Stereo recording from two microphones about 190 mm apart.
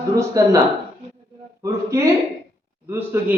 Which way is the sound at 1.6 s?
15° right (ahead or behind).